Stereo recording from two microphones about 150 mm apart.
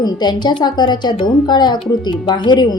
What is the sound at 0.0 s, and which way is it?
A woman's voice, 30° left (ahead or behind).